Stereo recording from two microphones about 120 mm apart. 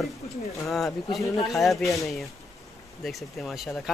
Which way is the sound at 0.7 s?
Centre (ahead or behind).